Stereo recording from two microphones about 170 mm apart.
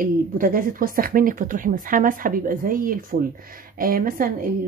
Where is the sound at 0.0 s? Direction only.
55° right (ahead or behind).